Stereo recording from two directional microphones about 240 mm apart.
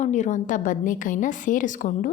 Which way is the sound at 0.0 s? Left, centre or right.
Left.